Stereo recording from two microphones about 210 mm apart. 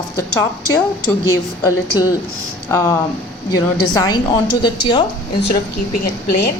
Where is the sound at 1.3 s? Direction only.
20° left (ahead or behind).